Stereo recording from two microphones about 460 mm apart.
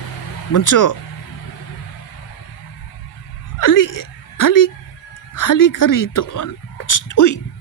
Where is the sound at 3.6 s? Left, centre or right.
Left.